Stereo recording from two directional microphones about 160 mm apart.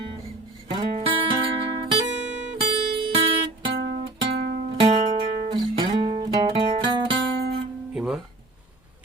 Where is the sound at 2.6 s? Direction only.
30° right (ahead or behind).